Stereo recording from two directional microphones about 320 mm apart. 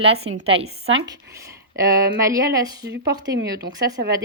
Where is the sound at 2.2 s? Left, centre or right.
Centre.